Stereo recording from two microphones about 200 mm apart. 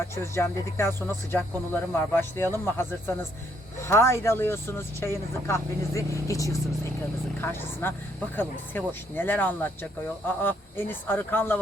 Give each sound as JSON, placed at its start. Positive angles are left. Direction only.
{"t": 0.2, "sound": "speech", "side_deg": 10}